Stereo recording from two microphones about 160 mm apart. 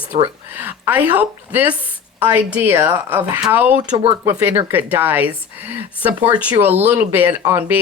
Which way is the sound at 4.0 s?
35° right (ahead or behind).